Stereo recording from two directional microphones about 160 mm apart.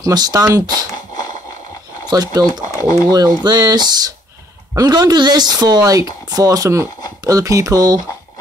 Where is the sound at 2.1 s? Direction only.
25° right (ahead or behind).